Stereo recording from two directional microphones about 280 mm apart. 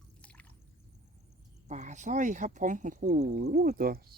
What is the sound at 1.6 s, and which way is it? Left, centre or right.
Speech, right.